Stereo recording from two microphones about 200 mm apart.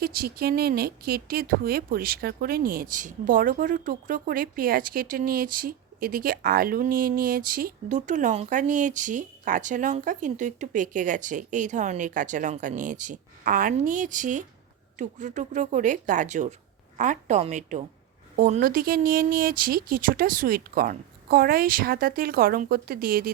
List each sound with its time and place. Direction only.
0.0 s speech: 50° right (ahead or behind)